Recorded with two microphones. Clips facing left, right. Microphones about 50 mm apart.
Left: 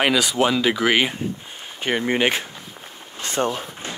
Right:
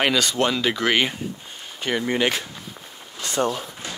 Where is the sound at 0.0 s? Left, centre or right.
Centre.